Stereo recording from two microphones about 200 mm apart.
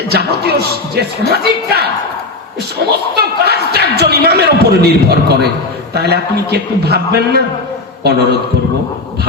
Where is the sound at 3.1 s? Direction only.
55° right (ahead or behind).